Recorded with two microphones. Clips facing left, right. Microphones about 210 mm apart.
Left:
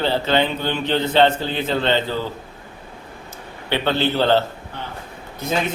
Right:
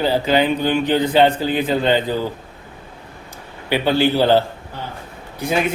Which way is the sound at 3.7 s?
10° right (ahead or behind).